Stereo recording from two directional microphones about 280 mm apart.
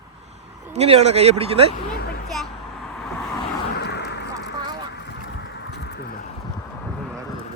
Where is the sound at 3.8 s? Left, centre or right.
Left.